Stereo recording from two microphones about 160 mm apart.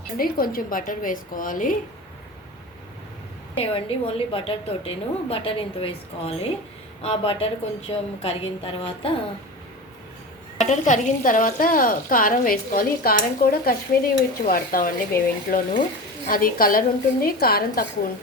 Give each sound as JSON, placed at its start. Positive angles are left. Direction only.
{"t": 0.2, "sound": "a woman's voice", "side_deg": 65}
{"t": 3.6, "sound": "a woman's voice", "side_deg": 35}
{"t": 10.6, "sound": "a woman's voice", "side_deg": 50}